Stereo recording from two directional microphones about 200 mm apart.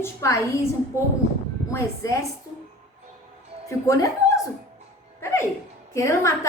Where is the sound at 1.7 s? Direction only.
15° left (ahead or behind).